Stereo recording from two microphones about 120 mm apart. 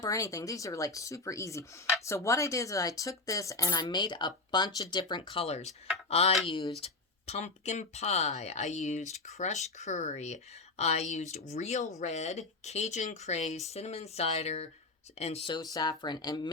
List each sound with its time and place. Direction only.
0.0 s speech: 25° left (ahead or behind); by 15.4 s 60° left (ahead or behind)
15.4 s speech: 35° left (ahead or behind)